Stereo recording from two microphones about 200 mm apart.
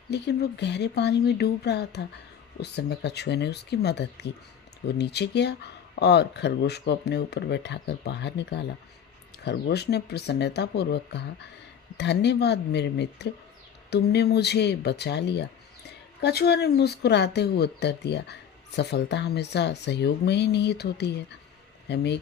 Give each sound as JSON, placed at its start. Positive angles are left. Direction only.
{"t": 0.1, "sound": "speech", "side_deg": 55}